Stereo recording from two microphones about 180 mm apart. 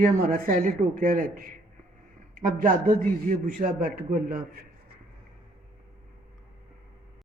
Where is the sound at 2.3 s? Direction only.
45° right (ahead or behind).